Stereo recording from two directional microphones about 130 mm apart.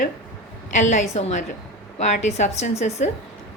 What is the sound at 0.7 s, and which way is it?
A woman's voice, 65° left (ahead or behind).